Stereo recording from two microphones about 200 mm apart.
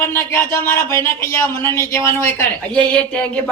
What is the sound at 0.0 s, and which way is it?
Speech, 10° left (ahead or behind).